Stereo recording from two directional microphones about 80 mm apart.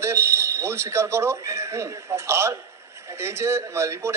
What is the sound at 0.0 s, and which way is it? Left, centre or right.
A man's voice, right.